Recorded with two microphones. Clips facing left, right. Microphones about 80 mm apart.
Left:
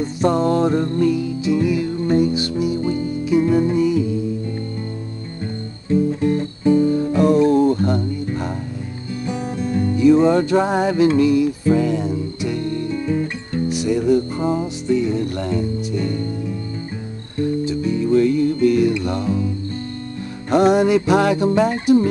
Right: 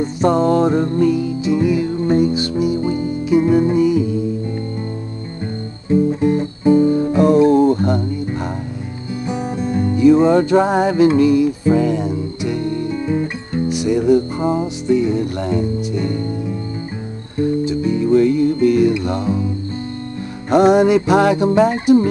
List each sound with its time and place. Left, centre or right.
0.0 s music: right
5.9 s music: right
17.4 s music: right
20.4 s music: centre